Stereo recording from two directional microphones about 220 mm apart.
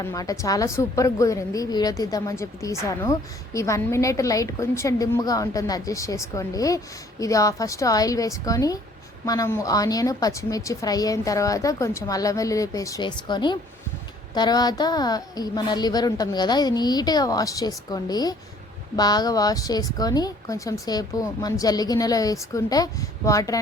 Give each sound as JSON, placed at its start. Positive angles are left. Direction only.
{"t": 0.0, "sound": "a woman's voice", "side_deg": 15}